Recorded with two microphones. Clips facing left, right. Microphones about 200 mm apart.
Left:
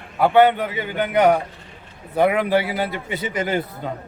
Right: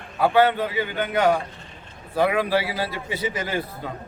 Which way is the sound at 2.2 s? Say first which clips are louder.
Left 3 dB; 20° left (ahead or behind).